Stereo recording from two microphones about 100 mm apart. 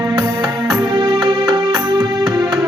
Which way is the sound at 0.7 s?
50° right (ahead or behind).